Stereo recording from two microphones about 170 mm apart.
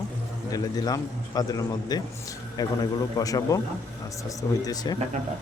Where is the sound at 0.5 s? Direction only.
20° left (ahead or behind).